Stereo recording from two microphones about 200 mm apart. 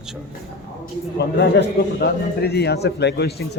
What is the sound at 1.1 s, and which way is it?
A man's voice, 55° left (ahead or behind).